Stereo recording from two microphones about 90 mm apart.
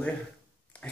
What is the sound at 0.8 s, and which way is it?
Pig, 20° left (ahead or behind).